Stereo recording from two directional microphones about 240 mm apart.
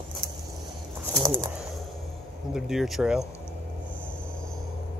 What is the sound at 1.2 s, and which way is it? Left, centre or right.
Bird, centre.